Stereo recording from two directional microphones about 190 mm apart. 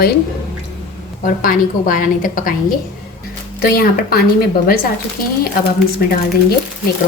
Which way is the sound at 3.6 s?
55° left (ahead or behind).